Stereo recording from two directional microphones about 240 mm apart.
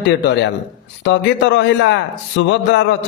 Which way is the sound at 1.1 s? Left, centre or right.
Left.